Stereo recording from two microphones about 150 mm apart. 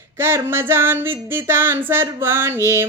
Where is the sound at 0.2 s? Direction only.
15° right (ahead or behind).